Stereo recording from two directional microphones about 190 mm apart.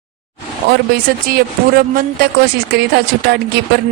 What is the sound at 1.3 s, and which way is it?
Speech, 50° right (ahead or behind).